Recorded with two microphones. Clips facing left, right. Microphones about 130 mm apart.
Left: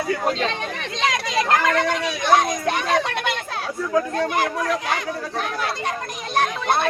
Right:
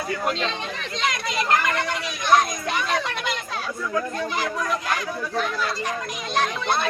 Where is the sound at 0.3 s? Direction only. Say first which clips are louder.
Left 3 dB; 50° left (ahead or behind).